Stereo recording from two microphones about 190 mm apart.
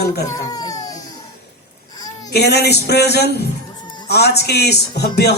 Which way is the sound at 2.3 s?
60° left (ahead or behind).